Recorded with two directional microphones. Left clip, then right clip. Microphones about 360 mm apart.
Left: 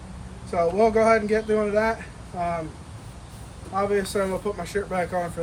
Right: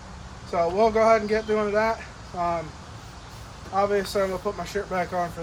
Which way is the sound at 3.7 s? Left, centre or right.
Centre.